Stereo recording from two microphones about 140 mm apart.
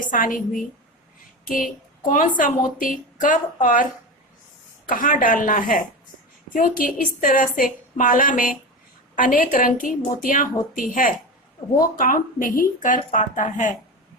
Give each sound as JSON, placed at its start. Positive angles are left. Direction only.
{"t": 0.0, "sound": "speech", "side_deg": 70}
{"t": 4.9, "sound": "a woman's voice", "side_deg": 80}